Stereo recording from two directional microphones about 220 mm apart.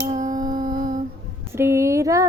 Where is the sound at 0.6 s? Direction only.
35° right (ahead or behind).